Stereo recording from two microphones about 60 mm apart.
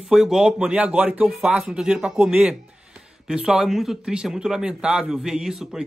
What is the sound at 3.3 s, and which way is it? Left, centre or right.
Speech, centre.